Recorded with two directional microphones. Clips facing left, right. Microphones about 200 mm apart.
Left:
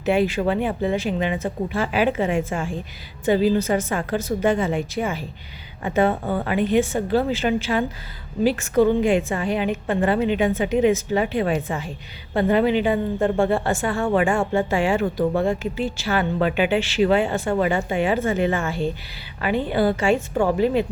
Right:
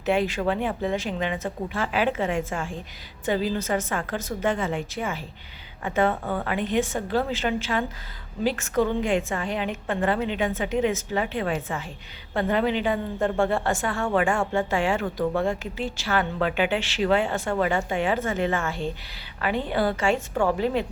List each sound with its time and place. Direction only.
0.0 s a woman's voice: 5° left (ahead or behind)
15.0 s speech: 25° left (ahead or behind)
15.4 s a woman's voice: 5° left (ahead or behind)
20.3 s speech: 20° left (ahead or behind)
20.6 s a woman's voice: 5° left (ahead or behind)